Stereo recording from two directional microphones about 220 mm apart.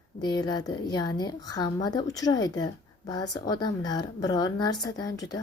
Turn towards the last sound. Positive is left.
turn(degrees=15)  # may be behind; listen again after turning